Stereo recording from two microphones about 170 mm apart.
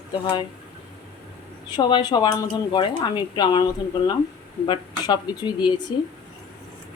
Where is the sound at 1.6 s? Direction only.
25° left (ahead or behind).